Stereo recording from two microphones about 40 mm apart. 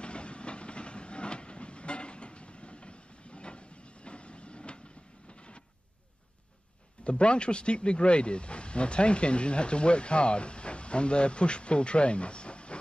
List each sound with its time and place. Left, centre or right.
0.0 s train: left
5.3 s printer: left
7.1 s speech: left